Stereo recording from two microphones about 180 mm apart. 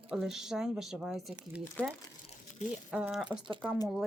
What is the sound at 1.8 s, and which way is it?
Speech, 10° left (ahead or behind).